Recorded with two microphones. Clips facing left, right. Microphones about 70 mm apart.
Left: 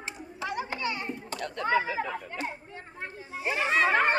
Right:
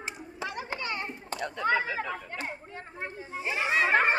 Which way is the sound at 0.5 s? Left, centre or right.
Right.